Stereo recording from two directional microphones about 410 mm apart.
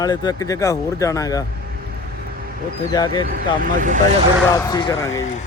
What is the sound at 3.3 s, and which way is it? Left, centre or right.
Speech, centre.